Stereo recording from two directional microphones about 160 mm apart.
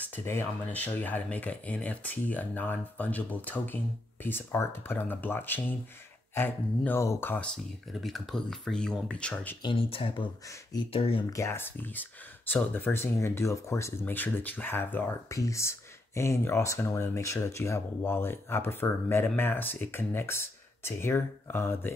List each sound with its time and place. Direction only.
0.0 s speech: 15° left (ahead or behind)
7.5 s speech: centre (ahead or behind)
9.6 s speech: 30° left (ahead or behind)
11.3 s speech: 15° left (ahead or behind)